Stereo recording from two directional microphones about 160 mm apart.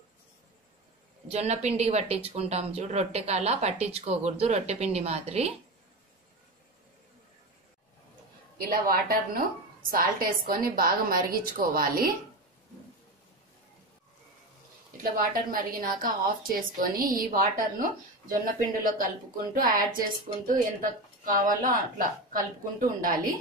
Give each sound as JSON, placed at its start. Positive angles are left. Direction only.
{"t": 1.3, "sound": "a woman's voice", "side_deg": -45}
{"t": 8.5, "sound": "speech", "side_deg": -65}
{"t": 15.1, "sound": "speech", "side_deg": -60}